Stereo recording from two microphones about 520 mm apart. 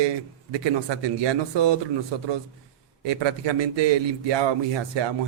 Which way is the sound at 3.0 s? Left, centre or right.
Right.